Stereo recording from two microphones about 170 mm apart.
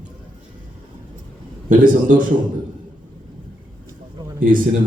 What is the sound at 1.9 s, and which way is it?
Speech, 50° right (ahead or behind).